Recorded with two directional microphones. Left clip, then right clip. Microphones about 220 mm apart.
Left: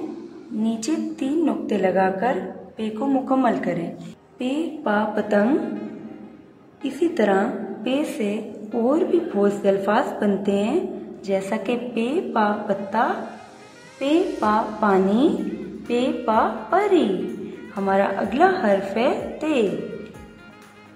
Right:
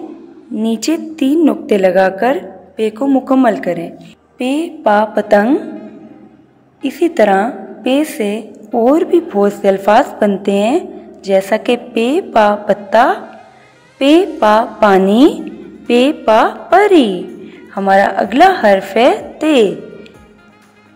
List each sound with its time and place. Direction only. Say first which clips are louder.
0.7 s a woman's voice: right 9 dB; 30° right (ahead or behind)
6.8 s a woman's voice: right 10 dB; 25° right (ahead or behind)